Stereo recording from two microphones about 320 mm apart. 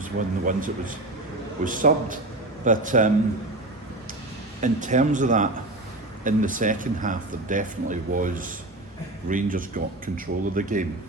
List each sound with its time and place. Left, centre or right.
0.0 s speech: right
4.6 s speech: right